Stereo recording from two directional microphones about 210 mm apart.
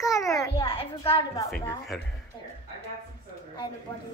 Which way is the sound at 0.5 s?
25° left (ahead or behind).